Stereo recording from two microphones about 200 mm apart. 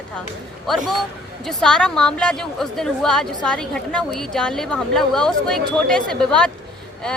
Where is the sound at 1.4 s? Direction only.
5° left (ahead or behind).